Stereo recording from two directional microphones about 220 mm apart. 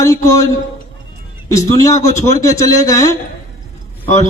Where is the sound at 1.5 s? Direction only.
15° left (ahead or behind).